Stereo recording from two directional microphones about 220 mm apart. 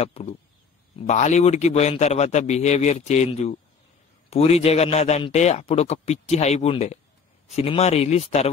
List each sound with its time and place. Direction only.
0.0 s a man's voice: 25° left (ahead or behind)